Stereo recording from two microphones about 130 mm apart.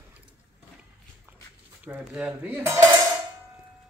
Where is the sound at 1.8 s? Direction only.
10° right (ahead or behind).